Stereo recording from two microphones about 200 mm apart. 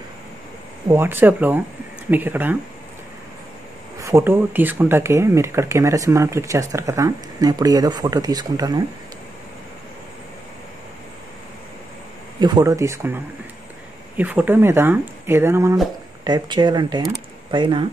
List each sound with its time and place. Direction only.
0.8 s speech: 10° right (ahead or behind)
4.0 s speech: 15° right (ahead or behind)
12.4 s speech: 20° right (ahead or behind)